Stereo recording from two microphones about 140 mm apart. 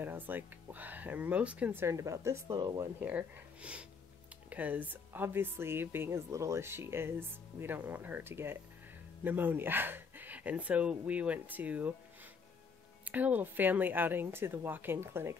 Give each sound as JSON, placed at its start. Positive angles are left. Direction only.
{"t": 0.0, "sound": "speech", "side_deg": -15}
{"t": 3.0, "sound": "speech", "side_deg": -10}
{"t": 13.0, "sound": "speech", "side_deg": -10}